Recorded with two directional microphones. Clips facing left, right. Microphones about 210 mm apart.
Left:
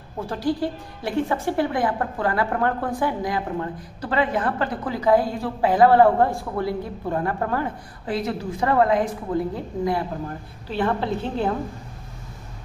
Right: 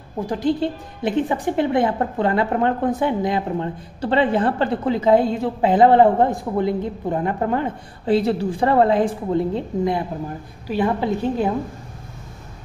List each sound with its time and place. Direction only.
0.2 s a woman's voice: 20° right (ahead or behind)